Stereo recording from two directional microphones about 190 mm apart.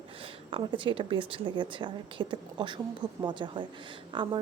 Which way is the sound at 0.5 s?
25° right (ahead or behind).